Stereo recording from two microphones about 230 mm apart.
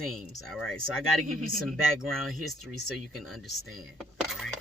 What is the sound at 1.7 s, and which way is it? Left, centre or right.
Speech, centre.